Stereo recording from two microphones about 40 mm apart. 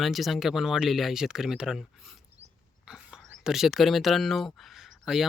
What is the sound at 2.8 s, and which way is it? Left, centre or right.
Speech, centre.